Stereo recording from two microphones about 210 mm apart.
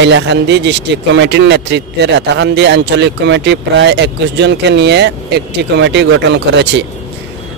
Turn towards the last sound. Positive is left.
turn(degrees=-55)  # may be behind; listen again after turning